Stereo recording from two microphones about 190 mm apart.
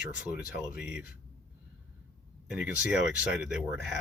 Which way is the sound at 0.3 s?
5° right (ahead or behind).